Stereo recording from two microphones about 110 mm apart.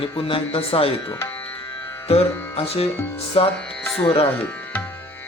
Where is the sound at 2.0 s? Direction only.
65° left (ahead or behind).